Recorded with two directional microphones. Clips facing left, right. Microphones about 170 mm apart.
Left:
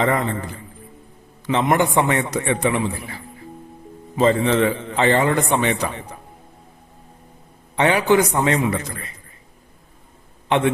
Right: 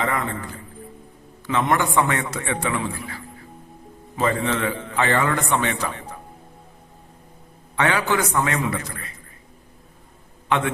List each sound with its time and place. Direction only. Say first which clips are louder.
0.0 s a man's voice: left 5 dB; 30° left (ahead or behind)
1.5 s a man's voice: left 3 dB; 20° left (ahead or behind)
4.2 s a man's voice: left 6 dB; 25° left (ahead or behind)
7.8 s a man's voice: left 5 dB; 20° left (ahead or behind)